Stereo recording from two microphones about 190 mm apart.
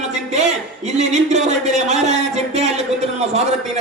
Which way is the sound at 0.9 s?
35° right (ahead or behind).